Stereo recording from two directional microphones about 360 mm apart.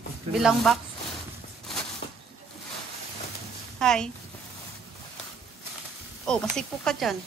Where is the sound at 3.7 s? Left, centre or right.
Centre.